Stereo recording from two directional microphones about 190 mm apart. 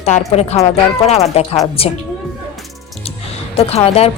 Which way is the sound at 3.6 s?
30° left (ahead or behind).